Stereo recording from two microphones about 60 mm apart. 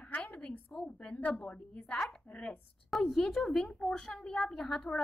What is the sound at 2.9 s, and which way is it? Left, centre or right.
A woman's voice, centre.